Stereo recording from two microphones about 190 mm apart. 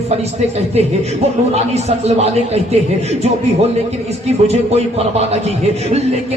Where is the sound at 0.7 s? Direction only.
35° right (ahead or behind).